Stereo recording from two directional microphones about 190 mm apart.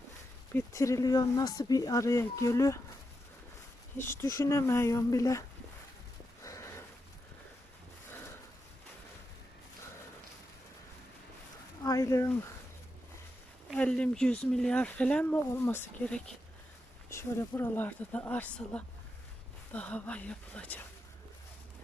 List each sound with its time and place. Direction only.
0.5 s speech: 15° left (ahead or behind)
4.0 s speech: 15° left (ahead or behind)
6.4 s sniff: 15° left (ahead or behind)
11.8 s speech: 15° left (ahead or behind)
13.7 s speech: 5° left (ahead or behind)